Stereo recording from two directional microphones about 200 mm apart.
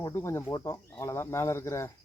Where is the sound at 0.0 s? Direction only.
15° left (ahead or behind).